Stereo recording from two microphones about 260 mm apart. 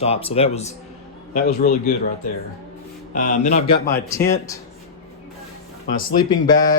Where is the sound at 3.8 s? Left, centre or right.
Centre.